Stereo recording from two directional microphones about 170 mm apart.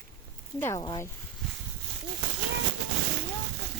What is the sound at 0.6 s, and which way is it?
Speech, 15° left (ahead or behind).